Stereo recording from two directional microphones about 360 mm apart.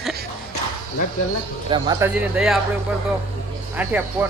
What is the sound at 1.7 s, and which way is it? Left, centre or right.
Speech, centre.